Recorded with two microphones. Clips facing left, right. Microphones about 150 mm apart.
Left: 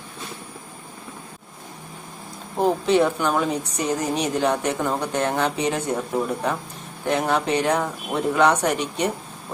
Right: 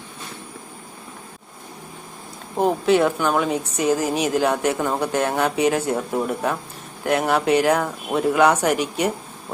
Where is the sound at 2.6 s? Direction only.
Centre (ahead or behind).